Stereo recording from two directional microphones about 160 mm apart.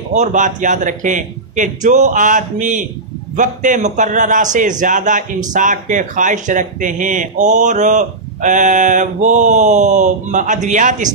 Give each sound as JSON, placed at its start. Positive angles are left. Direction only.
{"t": 0.1, "sound": "speech", "side_deg": -50}